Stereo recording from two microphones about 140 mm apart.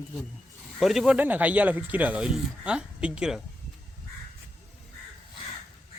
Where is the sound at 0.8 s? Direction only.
Centre (ahead or behind).